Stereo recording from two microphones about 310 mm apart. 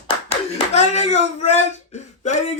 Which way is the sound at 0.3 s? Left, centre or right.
Left.